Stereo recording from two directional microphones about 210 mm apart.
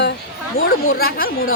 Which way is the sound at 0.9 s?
45° left (ahead or behind).